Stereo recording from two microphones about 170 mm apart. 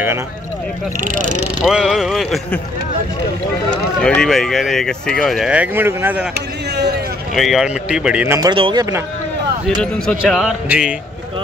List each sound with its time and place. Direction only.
1.0 s speech: 50° right (ahead or behind)
1.6 s speech: 5° right (ahead or behind)
4.0 s speech: 5° left (ahead or behind); by 6.2 s 15° right (ahead or behind)
7.3 s speech: centre (ahead or behind)
8.4 s speech: 30° right (ahead or behind)
9.8 s speech: 5° left (ahead or behind)